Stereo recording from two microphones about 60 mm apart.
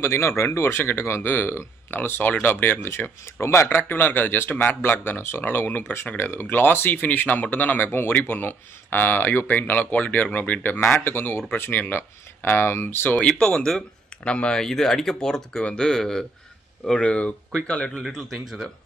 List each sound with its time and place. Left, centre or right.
0.0 s speech: left
3.3 s speech: left
3.9 s speech: left
13.4 s speech: centre
14.6 s speech: centre
18.0 s speech: centre